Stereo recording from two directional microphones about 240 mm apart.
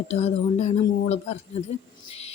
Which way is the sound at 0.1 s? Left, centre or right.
Left.